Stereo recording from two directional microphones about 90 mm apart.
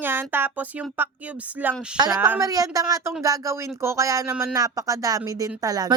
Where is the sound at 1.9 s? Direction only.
50° right (ahead or behind).